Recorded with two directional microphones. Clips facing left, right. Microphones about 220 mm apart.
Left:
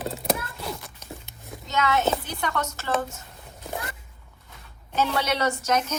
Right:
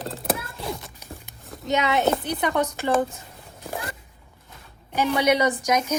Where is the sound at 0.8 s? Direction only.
15° right (ahead or behind).